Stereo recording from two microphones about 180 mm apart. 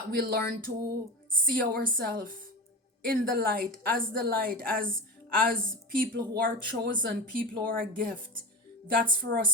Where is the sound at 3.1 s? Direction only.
55° right (ahead or behind).